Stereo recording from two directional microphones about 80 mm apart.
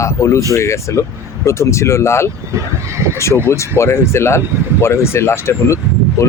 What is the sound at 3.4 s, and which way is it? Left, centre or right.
Speech, left.